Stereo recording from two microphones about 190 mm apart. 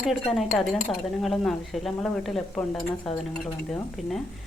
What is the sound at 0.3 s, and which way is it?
A woman's voice, centre (ahead or behind).